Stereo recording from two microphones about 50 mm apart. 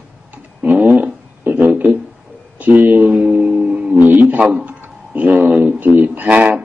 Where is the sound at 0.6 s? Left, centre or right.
Right.